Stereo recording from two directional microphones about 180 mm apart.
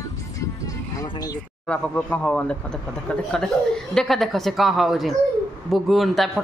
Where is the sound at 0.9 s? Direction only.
20° left (ahead or behind).